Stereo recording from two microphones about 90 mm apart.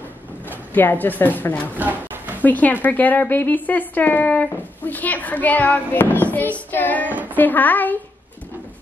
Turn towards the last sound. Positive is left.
turn(degrees=20)  # may be behind; listen again after turning